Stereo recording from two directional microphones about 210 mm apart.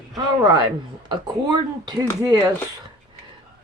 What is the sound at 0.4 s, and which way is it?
Speech, 15° right (ahead or behind).